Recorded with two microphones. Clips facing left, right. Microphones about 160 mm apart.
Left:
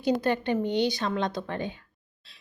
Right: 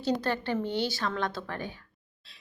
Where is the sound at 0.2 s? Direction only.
15° left (ahead or behind).